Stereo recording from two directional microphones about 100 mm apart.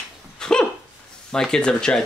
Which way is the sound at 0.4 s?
5° left (ahead or behind).